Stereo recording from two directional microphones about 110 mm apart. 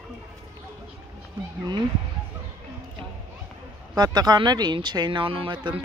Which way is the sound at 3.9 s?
40° right (ahead or behind).